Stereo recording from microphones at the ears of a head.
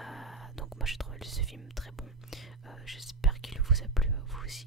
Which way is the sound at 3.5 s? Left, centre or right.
Centre.